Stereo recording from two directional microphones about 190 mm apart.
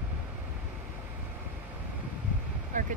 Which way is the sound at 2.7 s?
45° right (ahead or behind).